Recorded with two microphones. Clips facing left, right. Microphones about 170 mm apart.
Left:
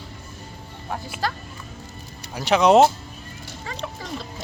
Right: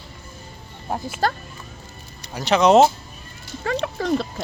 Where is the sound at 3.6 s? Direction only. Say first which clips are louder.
Right 10 dB; 60° right (ahead or behind).